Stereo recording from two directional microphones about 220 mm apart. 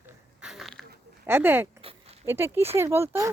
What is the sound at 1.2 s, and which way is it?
Speech, 10° right (ahead or behind).